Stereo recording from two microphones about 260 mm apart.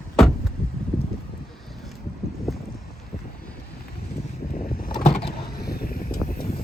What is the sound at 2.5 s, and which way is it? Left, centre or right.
Boat, centre.